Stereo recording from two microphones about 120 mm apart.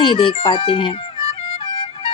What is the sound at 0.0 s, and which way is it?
A child's voice, 45° left (ahead or behind).